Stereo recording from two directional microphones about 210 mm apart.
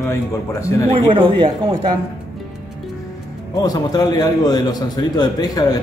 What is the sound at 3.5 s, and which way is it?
A man's voice, 15° left (ahead or behind).